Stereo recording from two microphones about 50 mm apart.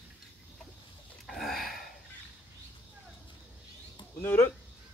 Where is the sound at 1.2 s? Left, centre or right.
Centre.